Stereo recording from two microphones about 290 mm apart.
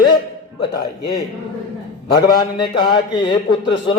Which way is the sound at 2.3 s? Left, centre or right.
Centre.